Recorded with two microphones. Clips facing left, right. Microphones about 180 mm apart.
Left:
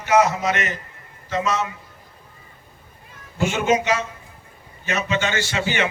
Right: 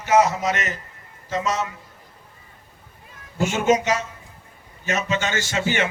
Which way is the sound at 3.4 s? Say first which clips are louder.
Right 1 dB; 45° right (ahead or behind).